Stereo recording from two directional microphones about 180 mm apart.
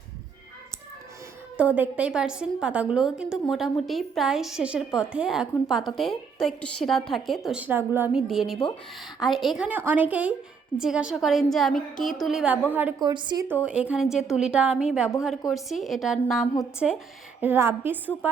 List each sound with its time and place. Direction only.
1.5 s a woman's voice: 10° right (ahead or behind)
13.0 s a woman's voice: 25° right (ahead or behind)
13.7 s a woman's voice: 5° right (ahead or behind)
17.4 s a woman's voice: 10° right (ahead or behind)